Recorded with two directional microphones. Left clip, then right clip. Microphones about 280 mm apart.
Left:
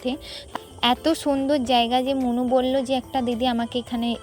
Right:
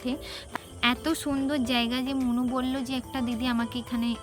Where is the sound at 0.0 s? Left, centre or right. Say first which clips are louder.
Left 5 dB; centre.